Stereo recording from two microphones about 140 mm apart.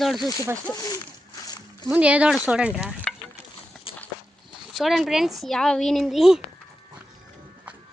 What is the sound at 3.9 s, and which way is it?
Walk, 40° left (ahead or behind).